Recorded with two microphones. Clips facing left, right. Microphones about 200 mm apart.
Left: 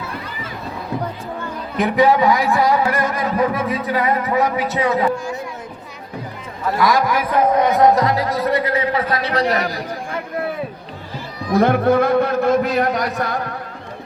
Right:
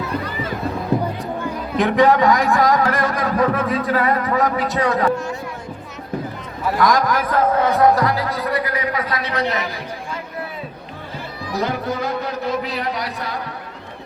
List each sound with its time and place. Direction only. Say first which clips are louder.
1.7 s a man's voice: even; 5° left (ahead or behind)
6.7 s a man's voice: even; 5° left (ahead or behind); by 9.8 s 35° left (ahead or behind)
11.5 s a man's voice: left 9 dB; 55° left (ahead or behind)